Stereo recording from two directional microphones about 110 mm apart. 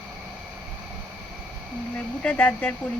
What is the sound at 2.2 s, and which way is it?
Speech, 15° left (ahead or behind).